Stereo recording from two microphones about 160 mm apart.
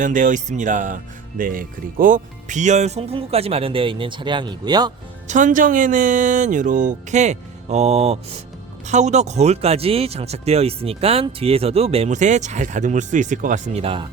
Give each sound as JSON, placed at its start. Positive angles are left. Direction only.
{"t": 0.0, "sound": "speech", "side_deg": -55}
{"t": 5.3, "sound": "speech", "side_deg": -55}
{"t": 13.8, "sound": "speech", "side_deg": -35}